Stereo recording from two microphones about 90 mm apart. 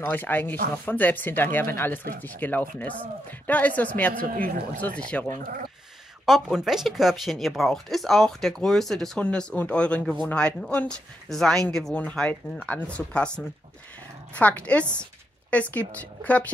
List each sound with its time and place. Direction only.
0.0 s speech: 20° left (ahead or behind)
6.2 s speech: 5° right (ahead or behind); by 16.5 s 15° left (ahead or behind)